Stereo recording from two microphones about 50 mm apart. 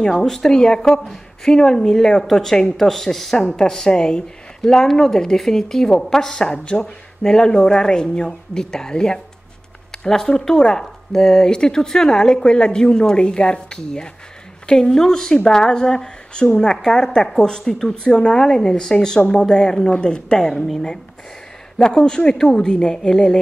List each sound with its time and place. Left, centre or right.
0.0 s a woman's voice: centre
21.7 s speech: centre